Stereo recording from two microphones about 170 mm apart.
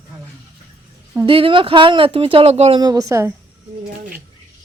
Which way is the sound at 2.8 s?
20° right (ahead or behind).